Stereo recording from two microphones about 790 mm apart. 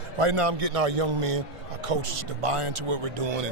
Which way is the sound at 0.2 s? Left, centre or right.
Right.